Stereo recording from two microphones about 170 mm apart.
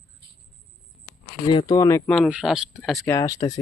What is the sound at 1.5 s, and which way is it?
Speech, 25° left (ahead or behind).